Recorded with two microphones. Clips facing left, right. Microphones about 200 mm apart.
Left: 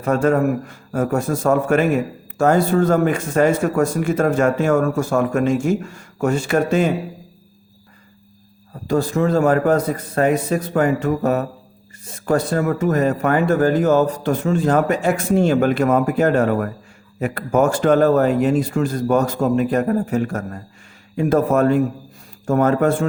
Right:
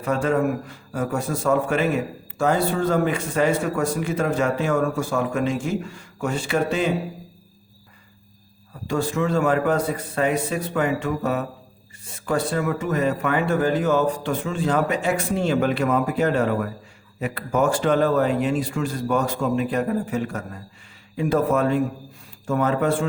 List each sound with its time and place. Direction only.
0.0 s a man's voice: 45° left (ahead or behind)
8.9 s a man's voice: 40° left (ahead or behind)